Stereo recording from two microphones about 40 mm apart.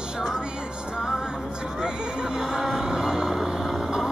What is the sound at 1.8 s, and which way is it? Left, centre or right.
Vehicle, centre.